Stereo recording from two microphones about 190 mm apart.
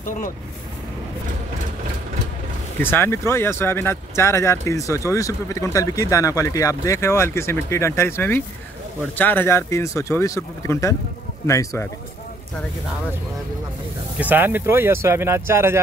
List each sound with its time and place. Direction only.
0.0 s speech: 45° left (ahead or behind)
2.8 s speech: 10° left (ahead or behind)
14.1 s speech: 10° right (ahead or behind)